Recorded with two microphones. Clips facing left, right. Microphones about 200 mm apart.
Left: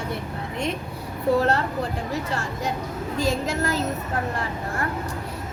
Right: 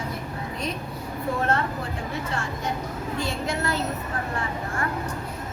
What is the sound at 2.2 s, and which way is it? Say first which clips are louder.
Speech: left 2 dB; 35° left (ahead or behind).